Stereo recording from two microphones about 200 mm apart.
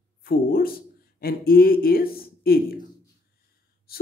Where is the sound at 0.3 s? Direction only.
45° left (ahead or behind).